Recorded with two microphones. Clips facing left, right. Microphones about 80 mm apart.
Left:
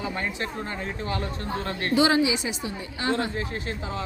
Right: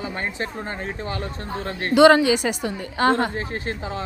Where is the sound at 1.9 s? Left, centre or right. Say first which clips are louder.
Right 8 dB; right.